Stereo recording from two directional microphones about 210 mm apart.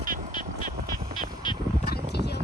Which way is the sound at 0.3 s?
20° left (ahead or behind).